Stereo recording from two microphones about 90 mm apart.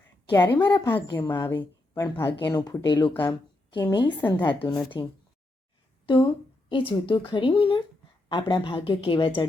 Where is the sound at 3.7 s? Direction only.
60° left (ahead or behind).